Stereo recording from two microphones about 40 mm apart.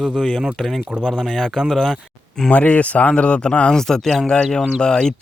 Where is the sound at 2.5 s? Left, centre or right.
Left.